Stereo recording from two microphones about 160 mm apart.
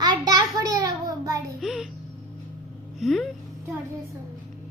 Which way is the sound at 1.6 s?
Centre (ahead or behind).